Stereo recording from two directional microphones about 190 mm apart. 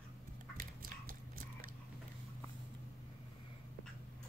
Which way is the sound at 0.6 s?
50° right (ahead or behind).